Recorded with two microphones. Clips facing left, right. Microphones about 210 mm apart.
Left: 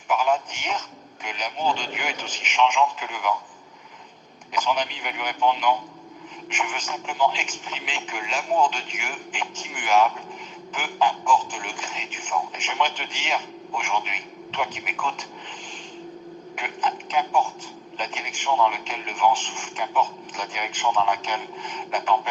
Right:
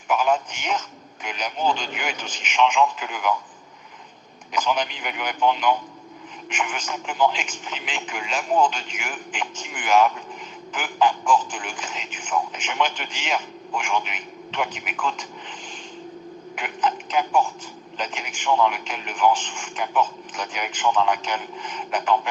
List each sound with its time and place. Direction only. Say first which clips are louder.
0.1 s speech: right 1 dB; 55° right (ahead or behind)
4.5 s speech: right 1 dB; 55° right (ahead or behind)
16.6 s speech: right 3 dB; 55° right (ahead or behind)